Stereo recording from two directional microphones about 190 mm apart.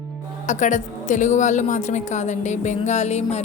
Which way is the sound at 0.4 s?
40° left (ahead or behind).